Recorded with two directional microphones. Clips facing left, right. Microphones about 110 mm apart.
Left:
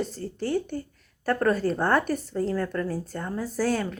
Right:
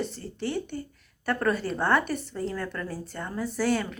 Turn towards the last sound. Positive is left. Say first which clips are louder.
# even
turn(degrees=40)  # may be behind; listen again after turning